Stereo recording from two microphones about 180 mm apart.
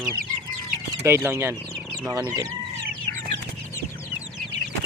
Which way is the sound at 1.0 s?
15° right (ahead or behind).